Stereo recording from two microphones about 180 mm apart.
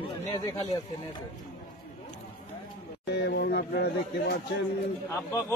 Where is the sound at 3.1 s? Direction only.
70° left (ahead or behind).